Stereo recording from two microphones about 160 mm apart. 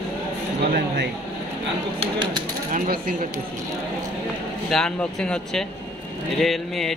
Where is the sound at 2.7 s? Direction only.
60° right (ahead or behind).